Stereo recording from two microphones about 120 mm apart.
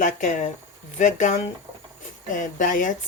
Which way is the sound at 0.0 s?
90° left.